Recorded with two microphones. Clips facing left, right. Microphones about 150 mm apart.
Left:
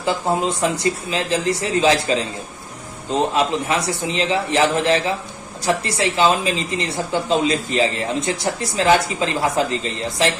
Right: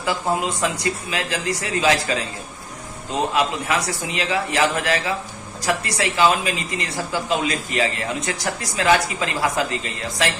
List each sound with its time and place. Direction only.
0.0 s speech: 30° left (ahead or behind)
3.3 s speech: 30° left (ahead or behind)